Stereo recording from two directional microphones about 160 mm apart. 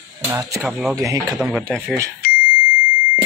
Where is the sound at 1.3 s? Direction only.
Centre (ahead or behind).